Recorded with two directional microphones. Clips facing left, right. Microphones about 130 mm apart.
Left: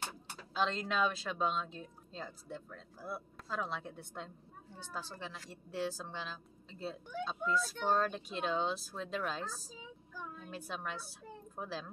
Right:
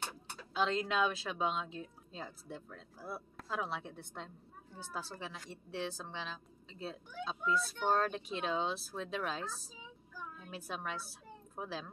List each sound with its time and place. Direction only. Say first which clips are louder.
0.6 s a woman's voice: right 1 dB; centre (ahead or behind)